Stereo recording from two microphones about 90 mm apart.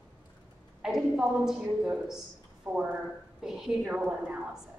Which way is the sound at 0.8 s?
5° right (ahead or behind).